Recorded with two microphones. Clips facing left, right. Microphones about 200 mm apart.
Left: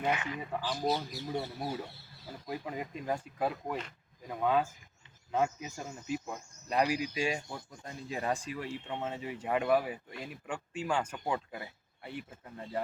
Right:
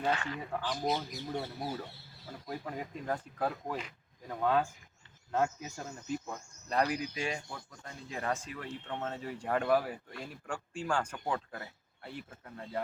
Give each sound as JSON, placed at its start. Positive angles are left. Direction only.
{"t": 0.0, "sound": "speech", "side_deg": 15}